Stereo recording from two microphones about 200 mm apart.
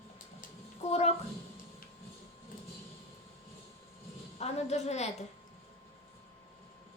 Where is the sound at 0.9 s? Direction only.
30° left (ahead or behind).